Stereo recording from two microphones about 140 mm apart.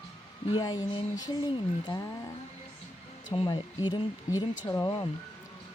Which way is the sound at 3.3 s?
35° left (ahead or behind).